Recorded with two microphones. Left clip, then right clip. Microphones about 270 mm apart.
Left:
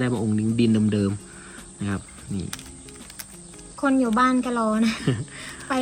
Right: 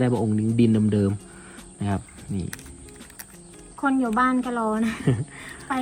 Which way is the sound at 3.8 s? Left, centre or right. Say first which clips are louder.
Left 1 dB; centre.